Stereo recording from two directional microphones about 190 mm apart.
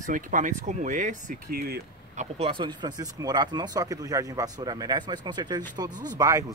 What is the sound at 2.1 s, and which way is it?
Speech, 30° right (ahead or behind).